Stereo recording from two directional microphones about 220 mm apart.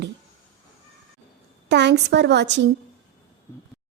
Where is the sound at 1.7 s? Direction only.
50° right (ahead or behind).